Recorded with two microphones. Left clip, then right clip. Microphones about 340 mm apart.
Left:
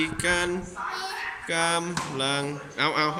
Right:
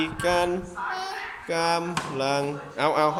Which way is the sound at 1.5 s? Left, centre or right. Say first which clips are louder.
Right 1 dB; centre.